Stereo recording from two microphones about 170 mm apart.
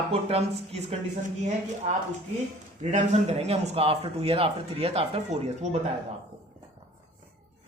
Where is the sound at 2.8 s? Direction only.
45° right (ahead or behind).